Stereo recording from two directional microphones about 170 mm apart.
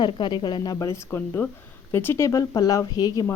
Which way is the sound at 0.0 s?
25° left (ahead or behind).